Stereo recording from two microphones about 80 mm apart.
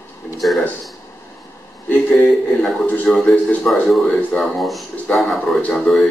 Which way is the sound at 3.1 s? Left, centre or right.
Centre.